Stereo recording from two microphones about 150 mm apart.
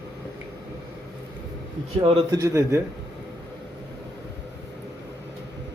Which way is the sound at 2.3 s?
20° right (ahead or behind).